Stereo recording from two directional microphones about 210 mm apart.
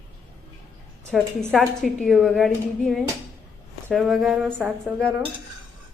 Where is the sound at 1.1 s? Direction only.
Centre (ahead or behind).